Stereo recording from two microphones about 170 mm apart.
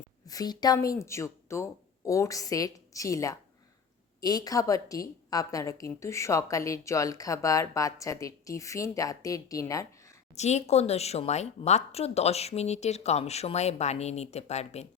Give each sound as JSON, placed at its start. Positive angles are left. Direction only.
{"t": 0.3, "sound": "speech", "side_deg": 25}
{"t": 10.3, "sound": "speech", "side_deg": 40}